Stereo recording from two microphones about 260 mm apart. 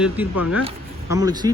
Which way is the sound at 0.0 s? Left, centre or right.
Centre.